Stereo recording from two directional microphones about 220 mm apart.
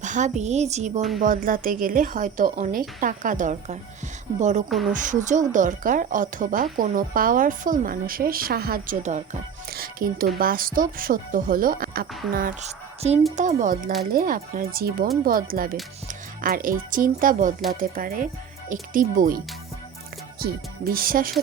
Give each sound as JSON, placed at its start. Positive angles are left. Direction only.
{"t": 0.0, "sound": "a woman's voice", "side_deg": -35}
{"t": 20.4, "sound": "a woman's voice", "side_deg": -40}